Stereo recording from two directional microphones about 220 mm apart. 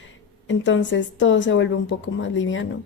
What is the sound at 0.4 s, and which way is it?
A woman's voice, 55° left (ahead or behind).